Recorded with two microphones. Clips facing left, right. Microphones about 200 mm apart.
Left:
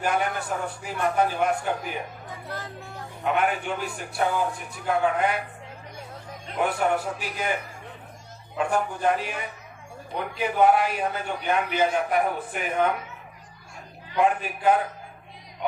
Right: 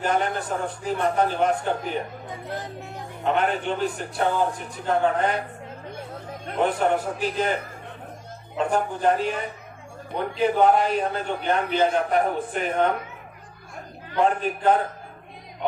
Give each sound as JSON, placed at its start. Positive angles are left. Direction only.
{"t": 0.0, "sound": "a man's voice", "side_deg": 10}
{"t": 2.5, "sound": "speech", "side_deg": -20}
{"t": 3.2, "sound": "a man's voice", "side_deg": 10}
{"t": 6.6, "sound": "a man's voice", "side_deg": 10}
{"t": 10.4, "sound": "a man's voice", "side_deg": 10}
{"t": 14.2, "sound": "a man's voice", "side_deg": 10}